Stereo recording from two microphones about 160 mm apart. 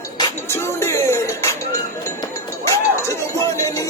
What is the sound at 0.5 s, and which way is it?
Music, 15° left (ahead or behind).